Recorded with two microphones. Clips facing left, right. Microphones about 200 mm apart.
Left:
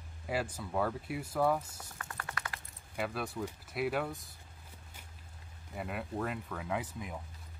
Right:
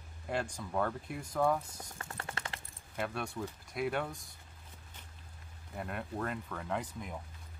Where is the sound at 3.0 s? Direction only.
Centre (ahead or behind).